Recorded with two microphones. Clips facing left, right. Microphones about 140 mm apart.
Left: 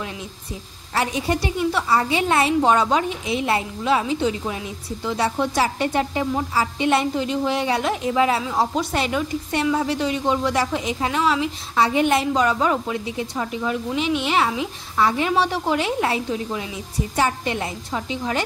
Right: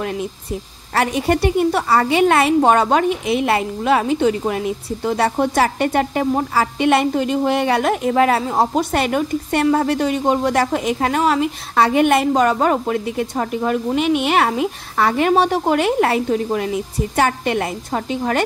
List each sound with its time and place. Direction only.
0.0 s a woman's voice: 55° right (ahead or behind)